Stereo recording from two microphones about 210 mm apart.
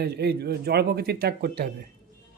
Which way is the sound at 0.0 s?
50° right (ahead or behind).